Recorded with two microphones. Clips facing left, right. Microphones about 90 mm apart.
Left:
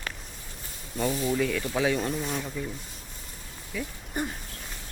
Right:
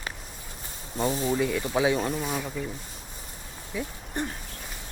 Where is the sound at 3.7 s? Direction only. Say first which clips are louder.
Right 2 dB; 20° right (ahead or behind).